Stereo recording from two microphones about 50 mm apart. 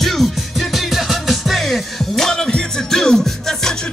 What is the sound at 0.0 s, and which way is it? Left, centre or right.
Music, centre.